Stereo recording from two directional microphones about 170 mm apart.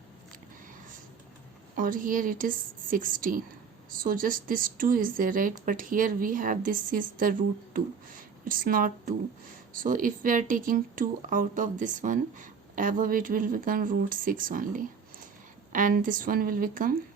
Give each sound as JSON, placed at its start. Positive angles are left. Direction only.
{"t": 1.7, "sound": "a woman's voice", "side_deg": -55}